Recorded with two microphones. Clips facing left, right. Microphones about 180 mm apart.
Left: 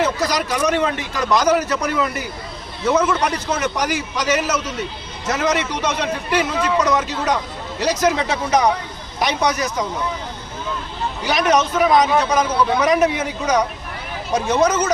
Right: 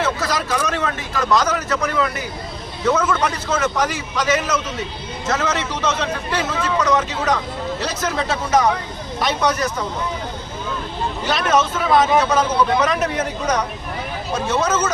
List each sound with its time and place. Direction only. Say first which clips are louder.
0.0 s a man's voice: left 2 dB; 15° left (ahead or behind)
11.3 s a man's voice: left 2 dB; 15° left (ahead or behind)